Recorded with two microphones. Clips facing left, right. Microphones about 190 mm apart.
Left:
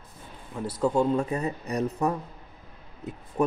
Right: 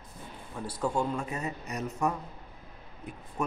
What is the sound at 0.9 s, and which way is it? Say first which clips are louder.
Speech: left 7 dB; 30° left (ahead or behind).